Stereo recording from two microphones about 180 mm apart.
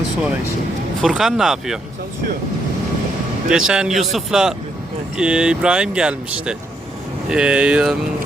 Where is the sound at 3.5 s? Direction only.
5° right (ahead or behind).